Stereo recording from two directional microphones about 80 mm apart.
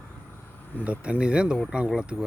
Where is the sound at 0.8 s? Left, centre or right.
Centre.